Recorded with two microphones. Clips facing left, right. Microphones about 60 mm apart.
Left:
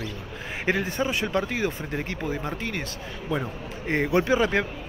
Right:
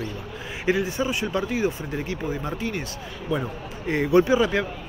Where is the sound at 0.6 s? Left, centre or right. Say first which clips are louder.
Right 2 dB; left.